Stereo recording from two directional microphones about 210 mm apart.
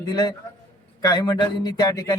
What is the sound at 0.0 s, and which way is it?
A man's voice, 20° left (ahead or behind).